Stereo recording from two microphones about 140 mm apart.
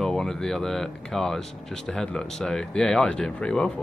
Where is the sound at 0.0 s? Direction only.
5° left (ahead or behind).